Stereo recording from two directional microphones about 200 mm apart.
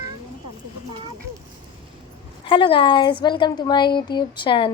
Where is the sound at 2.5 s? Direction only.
25° left (ahead or behind).